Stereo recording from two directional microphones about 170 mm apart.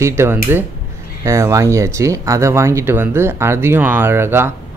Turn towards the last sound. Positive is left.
turn(degrees=-15)  # may be behind; listen again after turning